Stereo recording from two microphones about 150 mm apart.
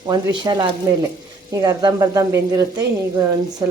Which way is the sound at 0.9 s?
20° right (ahead or behind).